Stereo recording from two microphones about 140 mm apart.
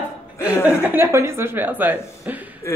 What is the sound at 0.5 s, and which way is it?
Speech, 15° left (ahead or behind).